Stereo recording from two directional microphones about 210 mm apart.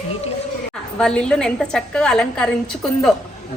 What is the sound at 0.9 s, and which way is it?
A woman's voice, 5° left (ahead or behind).